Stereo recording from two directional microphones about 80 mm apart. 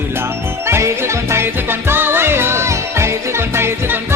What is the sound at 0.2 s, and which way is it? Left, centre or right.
Music, right.